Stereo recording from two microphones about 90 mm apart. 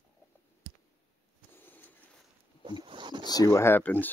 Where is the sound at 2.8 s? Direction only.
60° right (ahead or behind).